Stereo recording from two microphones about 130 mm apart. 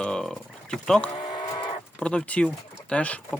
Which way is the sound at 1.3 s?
35° left (ahead or behind).